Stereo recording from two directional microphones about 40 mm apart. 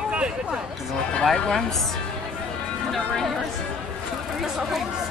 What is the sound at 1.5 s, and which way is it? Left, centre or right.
Music, centre.